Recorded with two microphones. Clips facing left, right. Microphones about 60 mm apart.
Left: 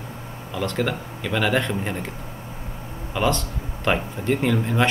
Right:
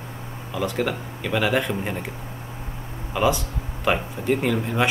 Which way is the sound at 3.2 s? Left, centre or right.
Centre.